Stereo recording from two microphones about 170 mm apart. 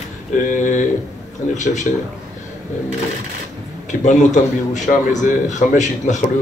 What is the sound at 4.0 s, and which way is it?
A man's voice, 45° left (ahead or behind).